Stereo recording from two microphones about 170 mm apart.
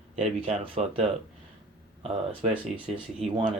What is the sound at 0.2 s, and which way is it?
Speech, 35° right (ahead or behind).